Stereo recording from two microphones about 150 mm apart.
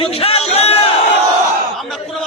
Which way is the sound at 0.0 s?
40° left (ahead or behind).